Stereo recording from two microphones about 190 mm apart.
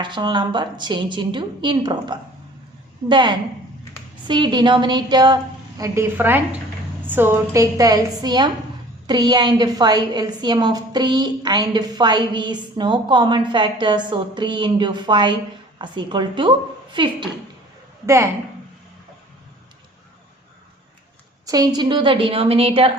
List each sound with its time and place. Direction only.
0.0 s a woman's voice: 25° right (ahead or behind)
18.0 s a woman's voice: 15° right (ahead or behind)
21.4 s a woman's voice: 20° right (ahead or behind)